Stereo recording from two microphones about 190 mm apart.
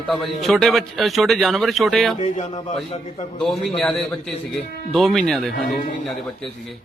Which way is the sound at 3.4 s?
Centre (ahead or behind).